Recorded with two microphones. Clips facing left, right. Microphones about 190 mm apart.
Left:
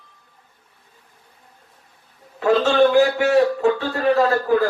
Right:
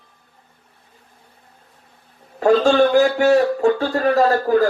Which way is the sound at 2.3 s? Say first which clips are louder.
Right 2 dB; 45° right (ahead or behind).